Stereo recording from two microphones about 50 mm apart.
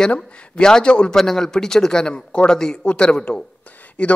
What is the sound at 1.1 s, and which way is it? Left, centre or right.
Speech, centre.